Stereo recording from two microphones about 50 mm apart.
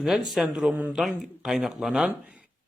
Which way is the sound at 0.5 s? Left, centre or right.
Centre.